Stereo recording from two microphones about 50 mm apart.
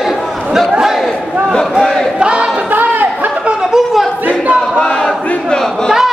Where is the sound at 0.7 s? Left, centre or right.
Centre.